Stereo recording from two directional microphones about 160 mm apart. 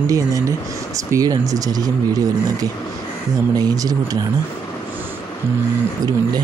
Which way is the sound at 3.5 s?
25° right (ahead or behind).